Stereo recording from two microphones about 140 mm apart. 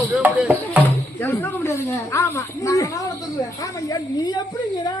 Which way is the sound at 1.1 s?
15° left (ahead or behind).